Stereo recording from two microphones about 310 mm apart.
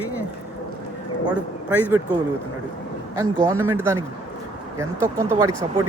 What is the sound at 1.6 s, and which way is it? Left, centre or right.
Speech, centre.